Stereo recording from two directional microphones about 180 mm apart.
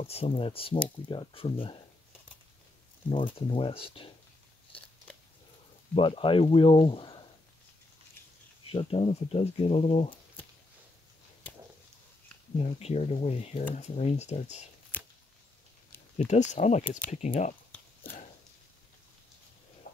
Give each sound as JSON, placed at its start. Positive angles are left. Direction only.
{"t": 0.0, "sound": "speech", "side_deg": 35}
{"t": 3.1, "sound": "speech", "side_deg": 30}
{"t": 5.9, "sound": "speech", "side_deg": 30}
{"t": 8.6, "sound": "speech", "side_deg": 30}
{"t": 12.5, "sound": "speech", "side_deg": 35}
{"t": 16.3, "sound": "speech", "side_deg": 40}